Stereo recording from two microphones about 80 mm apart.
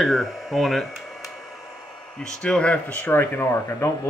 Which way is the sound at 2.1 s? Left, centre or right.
Centre.